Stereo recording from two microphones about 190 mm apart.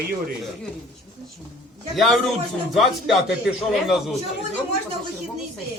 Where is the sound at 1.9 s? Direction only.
Centre (ahead or behind).